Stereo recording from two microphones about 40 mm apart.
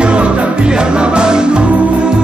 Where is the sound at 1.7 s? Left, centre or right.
Right.